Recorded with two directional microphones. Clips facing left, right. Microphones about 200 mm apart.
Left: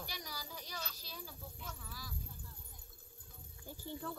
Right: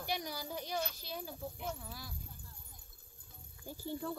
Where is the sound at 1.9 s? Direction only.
60° right (ahead or behind).